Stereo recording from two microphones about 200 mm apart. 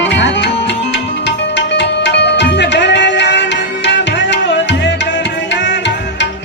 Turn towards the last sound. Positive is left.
turn(degrees=60)  # may be behind; listen again after turning